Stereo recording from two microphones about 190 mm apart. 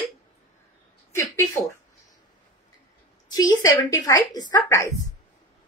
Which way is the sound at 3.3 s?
20° left (ahead or behind).